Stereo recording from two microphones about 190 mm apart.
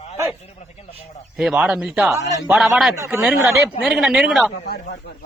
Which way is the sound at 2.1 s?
15° right (ahead or behind).